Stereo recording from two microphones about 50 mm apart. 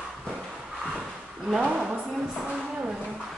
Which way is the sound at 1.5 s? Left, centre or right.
Centre.